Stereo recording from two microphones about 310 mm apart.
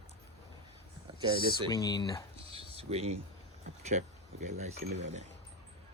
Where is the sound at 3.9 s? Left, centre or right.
Right.